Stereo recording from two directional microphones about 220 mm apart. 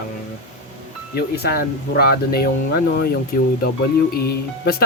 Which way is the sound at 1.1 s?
45° left (ahead or behind).